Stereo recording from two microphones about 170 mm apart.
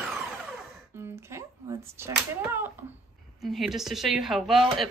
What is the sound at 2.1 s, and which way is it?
Speech, 20° right (ahead or behind).